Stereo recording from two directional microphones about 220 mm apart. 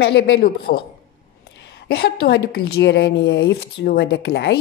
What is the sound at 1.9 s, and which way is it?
Speech, 45° left (ahead or behind).